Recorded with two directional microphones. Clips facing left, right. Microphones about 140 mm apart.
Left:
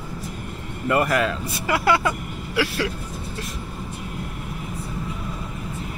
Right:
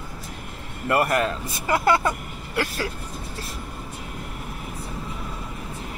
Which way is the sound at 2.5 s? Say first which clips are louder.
Left 3 dB; 45° right (ahead or behind).